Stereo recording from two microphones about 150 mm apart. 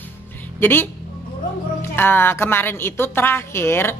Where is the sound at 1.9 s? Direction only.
15° left (ahead or behind).